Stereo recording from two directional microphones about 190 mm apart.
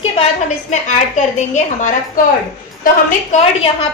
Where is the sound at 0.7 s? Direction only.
40° left (ahead or behind).